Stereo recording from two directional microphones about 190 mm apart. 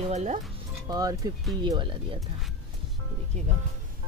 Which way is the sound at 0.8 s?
20° right (ahead or behind).